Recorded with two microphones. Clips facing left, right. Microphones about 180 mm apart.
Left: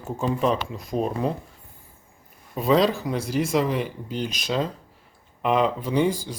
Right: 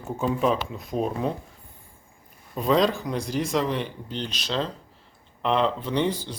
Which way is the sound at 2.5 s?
5° left (ahead or behind).